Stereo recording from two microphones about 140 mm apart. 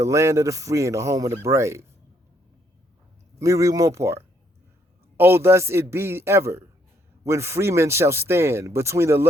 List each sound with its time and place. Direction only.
0.0 s speech: 20° right (ahead or behind)
3.3 s speech: 20° right (ahead or behind)